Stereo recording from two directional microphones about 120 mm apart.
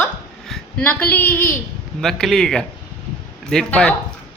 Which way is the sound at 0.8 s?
15° left (ahead or behind).